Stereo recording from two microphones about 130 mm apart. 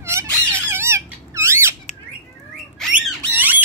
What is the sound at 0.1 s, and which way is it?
Squeak, 20° right (ahead or behind).